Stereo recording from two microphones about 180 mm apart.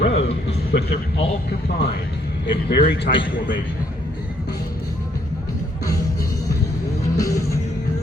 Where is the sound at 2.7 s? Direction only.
65° left (ahead or behind).